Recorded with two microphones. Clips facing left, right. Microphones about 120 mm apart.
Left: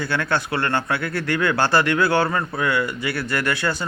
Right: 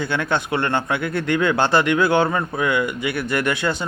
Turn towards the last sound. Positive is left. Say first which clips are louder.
# right 2 dB
turn(degrees=-20)  # may be behind; listen again after turning